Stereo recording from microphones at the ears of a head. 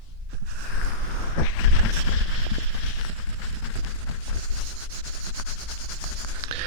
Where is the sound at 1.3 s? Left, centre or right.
Left.